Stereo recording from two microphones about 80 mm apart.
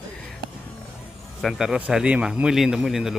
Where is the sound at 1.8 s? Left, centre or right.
Centre.